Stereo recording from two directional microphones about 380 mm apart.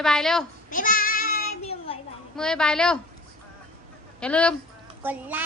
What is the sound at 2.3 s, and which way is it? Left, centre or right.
Child singing, centre.